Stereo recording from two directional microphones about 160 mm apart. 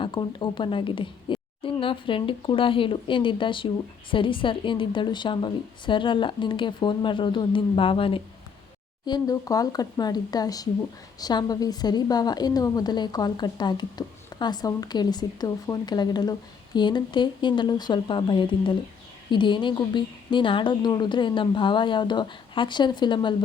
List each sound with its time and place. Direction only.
0.0 s a woman's voice: 30° left (ahead or behind)